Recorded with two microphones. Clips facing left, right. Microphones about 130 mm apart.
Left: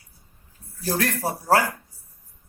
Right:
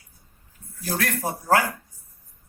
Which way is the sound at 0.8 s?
30° left (ahead or behind).